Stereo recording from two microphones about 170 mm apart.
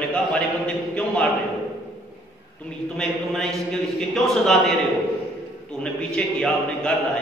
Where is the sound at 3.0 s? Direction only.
Centre (ahead or behind).